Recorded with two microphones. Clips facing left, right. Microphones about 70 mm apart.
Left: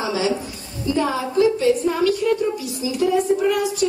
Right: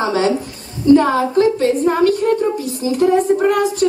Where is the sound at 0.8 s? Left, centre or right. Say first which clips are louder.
Right 10 dB; right.